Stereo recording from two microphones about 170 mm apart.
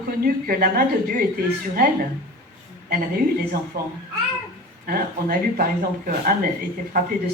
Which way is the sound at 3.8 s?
60° right (ahead or behind).